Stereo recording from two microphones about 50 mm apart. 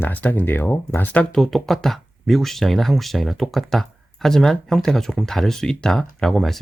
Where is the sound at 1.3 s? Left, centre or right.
Centre.